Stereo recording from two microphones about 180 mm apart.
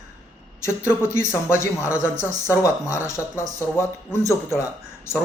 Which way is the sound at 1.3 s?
15° left (ahead or behind).